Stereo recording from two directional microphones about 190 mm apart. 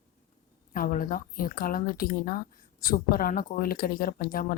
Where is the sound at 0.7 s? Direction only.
45° left (ahead or behind).